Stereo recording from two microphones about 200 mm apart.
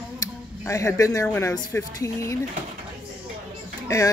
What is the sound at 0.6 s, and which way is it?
Speech, 15° left (ahead or behind).